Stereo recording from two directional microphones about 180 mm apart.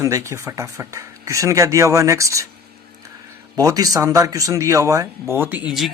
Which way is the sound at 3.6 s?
20° right (ahead or behind).